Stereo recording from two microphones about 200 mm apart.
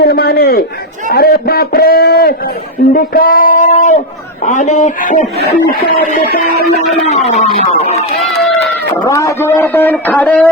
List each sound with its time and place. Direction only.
0.0 s a sound: 50° left (ahead or behind)
1.1 s a man's voice: 50° left (ahead or behind)
7.3 s speech: 35° left (ahead or behind)
9.0 s a man's voice: 15° left (ahead or behind)